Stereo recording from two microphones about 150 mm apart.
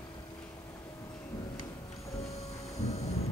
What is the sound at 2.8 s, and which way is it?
Vehicle, 45° left (ahead or behind).